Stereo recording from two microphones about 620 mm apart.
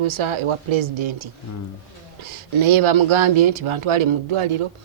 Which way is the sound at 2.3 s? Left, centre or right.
Right.